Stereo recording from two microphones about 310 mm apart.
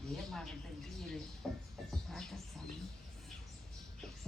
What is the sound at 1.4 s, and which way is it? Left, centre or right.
Music, centre.